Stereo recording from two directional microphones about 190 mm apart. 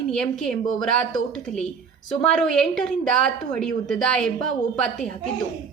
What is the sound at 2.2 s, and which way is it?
A woman's voice, 5° left (ahead or behind).